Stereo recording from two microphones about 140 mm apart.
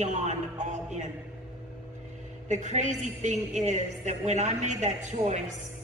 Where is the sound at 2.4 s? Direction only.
60° right (ahead or behind).